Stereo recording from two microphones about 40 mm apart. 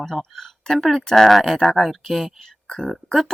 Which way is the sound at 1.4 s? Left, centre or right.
Centre.